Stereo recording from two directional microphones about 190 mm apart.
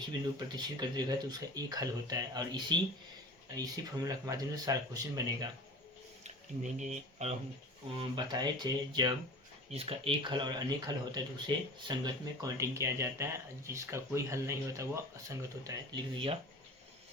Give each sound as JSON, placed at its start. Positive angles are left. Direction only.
{"t": 0.3, "sound": "speech", "side_deg": -20}
{"t": 6.2, "sound": "speech", "side_deg": -40}
{"t": 7.9, "sound": "speech", "side_deg": -25}